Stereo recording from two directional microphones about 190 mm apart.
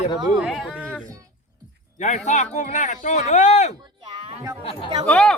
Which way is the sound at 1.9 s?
40° left (ahead or behind).